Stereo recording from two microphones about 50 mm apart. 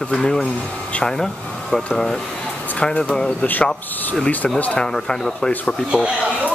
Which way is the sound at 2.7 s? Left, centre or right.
Left.